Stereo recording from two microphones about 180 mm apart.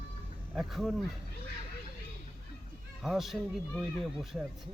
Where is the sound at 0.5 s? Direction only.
Centre (ahead or behind).